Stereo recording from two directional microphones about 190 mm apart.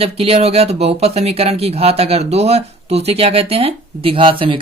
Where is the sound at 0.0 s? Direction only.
30° right (ahead or behind).